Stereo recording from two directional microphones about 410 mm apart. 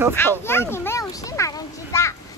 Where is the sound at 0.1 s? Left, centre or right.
Centre.